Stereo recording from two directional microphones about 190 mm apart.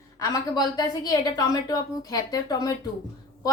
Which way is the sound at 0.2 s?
20° left (ahead or behind).